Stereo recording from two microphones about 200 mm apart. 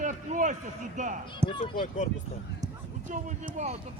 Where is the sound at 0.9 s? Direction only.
40° right (ahead or behind).